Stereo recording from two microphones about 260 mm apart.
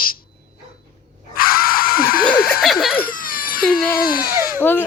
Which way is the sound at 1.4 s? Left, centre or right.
Left.